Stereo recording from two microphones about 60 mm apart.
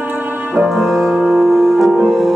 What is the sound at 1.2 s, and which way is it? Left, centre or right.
Music, centre.